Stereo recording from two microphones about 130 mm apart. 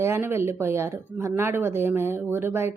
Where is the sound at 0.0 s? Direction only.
20° right (ahead or behind).